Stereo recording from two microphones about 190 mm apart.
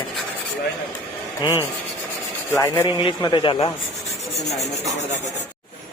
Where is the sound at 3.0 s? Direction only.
25° left (ahead or behind).